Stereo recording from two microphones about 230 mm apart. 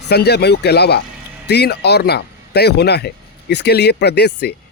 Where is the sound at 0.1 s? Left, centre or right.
Left.